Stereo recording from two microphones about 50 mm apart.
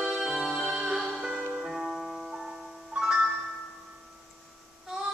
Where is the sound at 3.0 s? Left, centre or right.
Centre.